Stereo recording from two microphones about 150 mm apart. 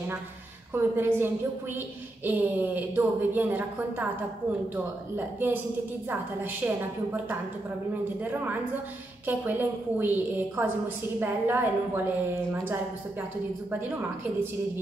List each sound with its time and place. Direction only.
0.7 s a woman's voice: 15° right (ahead or behind)
4.7 s a woman's voice: 10° right (ahead or behind)
13.7 s a woman's voice: 15° right (ahead or behind)